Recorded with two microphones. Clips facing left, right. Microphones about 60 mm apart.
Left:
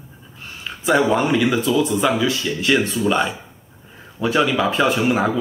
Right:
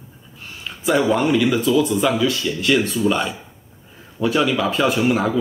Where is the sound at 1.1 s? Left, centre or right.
Centre.